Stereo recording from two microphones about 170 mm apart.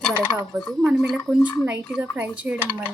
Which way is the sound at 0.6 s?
Centre (ahead or behind).